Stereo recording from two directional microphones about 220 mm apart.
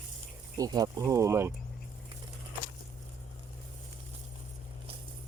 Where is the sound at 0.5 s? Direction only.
15° right (ahead or behind).